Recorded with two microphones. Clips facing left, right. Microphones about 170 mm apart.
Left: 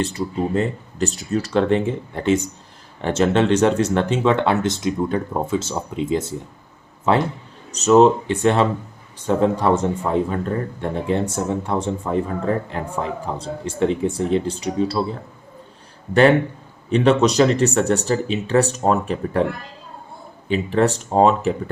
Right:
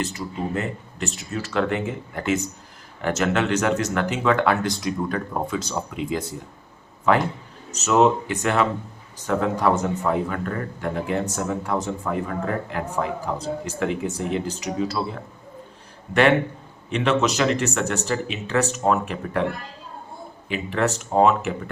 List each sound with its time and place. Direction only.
0.0 s speech: 30° left (ahead or behind)
7.7 s speech: 35° left (ahead or behind)
16.9 s speech: 35° left (ahead or behind)
20.5 s speech: 35° left (ahead or behind)